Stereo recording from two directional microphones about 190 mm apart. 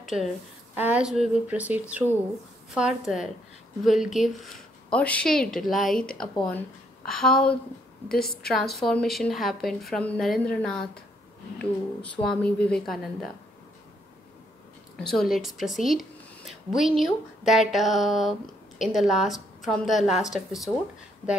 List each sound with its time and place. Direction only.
0.0 s a woman's voice: centre (ahead or behind)
8.1 s a woman's voice: 55° left (ahead or behind)
8.4 s speech: centre (ahead or behind)
12.0 s speech: 5° left (ahead or behind)
15.0 s speech: centre (ahead or behind)